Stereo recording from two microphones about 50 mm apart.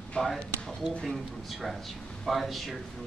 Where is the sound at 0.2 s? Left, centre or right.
Left.